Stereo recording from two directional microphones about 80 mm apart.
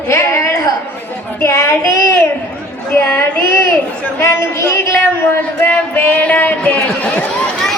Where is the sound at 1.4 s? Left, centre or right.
Left.